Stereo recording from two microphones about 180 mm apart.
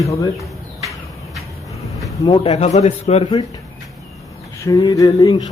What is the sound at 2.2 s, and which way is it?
A man's voice, 35° left (ahead or behind).